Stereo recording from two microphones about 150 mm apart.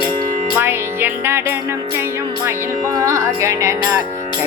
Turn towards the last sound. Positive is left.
turn(degrees=-20)  # may be behind; listen again after turning